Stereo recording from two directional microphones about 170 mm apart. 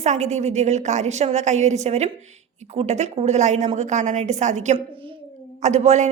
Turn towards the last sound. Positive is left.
turn(degrees=-40)  # may be behind; listen again after turning